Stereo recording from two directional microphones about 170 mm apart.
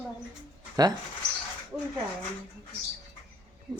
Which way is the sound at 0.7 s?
25° right (ahead or behind).